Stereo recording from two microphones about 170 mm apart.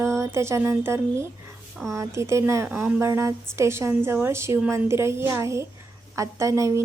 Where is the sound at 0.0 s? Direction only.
15° right (ahead or behind).